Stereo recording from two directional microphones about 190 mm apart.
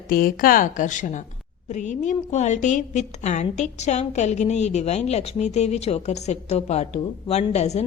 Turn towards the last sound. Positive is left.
turn(degrees=35)  # may be behind; listen again after turning